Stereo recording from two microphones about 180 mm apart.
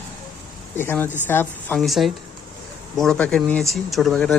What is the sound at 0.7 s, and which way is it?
Speech, 10° left (ahead or behind).